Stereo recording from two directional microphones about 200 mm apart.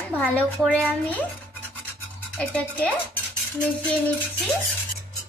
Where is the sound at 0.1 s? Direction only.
5° left (ahead or behind).